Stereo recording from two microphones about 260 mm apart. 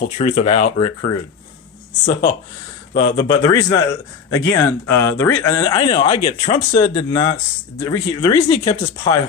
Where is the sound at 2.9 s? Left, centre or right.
Centre.